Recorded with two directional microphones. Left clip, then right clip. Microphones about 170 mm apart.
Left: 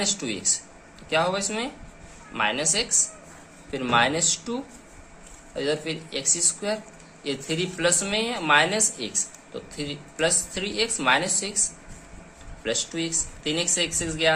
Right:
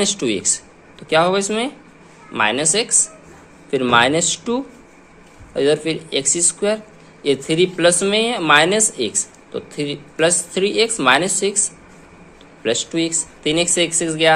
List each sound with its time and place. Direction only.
0.0 s speech: 45° right (ahead or behind)
12.6 s speech: 40° right (ahead or behind)